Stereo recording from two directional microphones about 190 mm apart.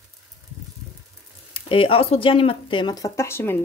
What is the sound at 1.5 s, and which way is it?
Speech, 30° left (ahead or behind).